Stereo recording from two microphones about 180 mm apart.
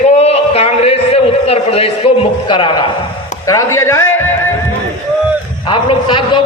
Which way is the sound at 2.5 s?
25° left (ahead or behind).